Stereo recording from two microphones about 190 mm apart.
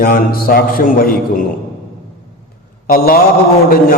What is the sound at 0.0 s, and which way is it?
A man's voice, 50° left (ahead or behind).